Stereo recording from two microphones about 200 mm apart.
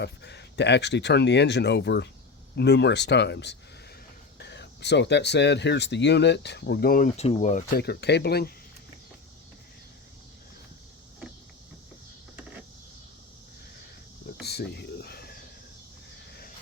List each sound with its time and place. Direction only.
0.0 s speech: 60° left (ahead or behind)
7.2 s speech: 35° left (ahead or behind)
7.8 s speech: 55° left (ahead or behind)
14.4 s a sound: 55° left (ahead or behind)